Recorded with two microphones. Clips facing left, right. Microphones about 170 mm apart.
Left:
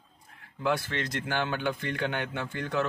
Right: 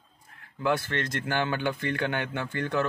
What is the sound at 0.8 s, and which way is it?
Mantra, 50° right (ahead or behind).